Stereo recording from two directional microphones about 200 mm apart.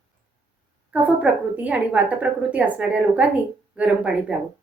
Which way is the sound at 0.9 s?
5° right (ahead or behind).